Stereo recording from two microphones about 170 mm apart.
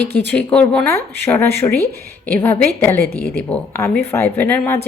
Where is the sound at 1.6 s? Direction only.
25° left (ahead or behind).